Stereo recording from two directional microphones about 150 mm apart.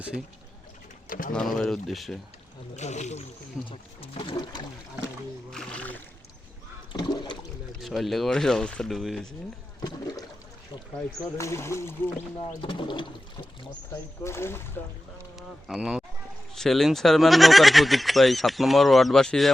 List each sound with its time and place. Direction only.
1.0 s speech: 65° left (ahead or behind)
1.3 s speech: 5° left (ahead or behind)
2.7 s speech: 50° left (ahead or behind)
3.7 s speech: 40° left (ahead or behind)
5.5 s a sound: 5° left (ahead or behind)
6.9 s a sound: 30° left (ahead or behind)
7.8 s speech: centre (ahead or behind)
9.8 s toilet flush: 25° left (ahead or behind)
11.3 s speech: 20° left (ahead or behind)
12.4 s speech: 35° left (ahead or behind)
13.9 s speech: 15° left (ahead or behind)
15.4 s speech: 5° right (ahead or behind)